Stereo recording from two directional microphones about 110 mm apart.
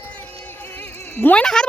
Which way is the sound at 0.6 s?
20° left (ahead or behind).